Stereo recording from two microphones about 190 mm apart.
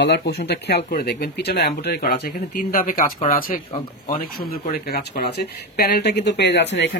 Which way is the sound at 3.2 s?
50° left (ahead or behind).